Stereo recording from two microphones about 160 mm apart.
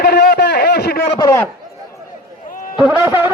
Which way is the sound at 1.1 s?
20° left (ahead or behind).